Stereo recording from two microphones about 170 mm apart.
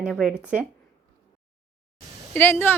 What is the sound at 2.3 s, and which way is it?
Speech, 10° left (ahead or behind).